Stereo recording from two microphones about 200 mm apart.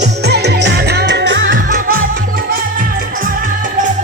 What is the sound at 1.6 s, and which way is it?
Music, 40° right (ahead or behind).